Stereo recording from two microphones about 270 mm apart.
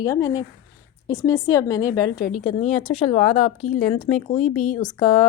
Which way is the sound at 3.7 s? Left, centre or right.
Centre.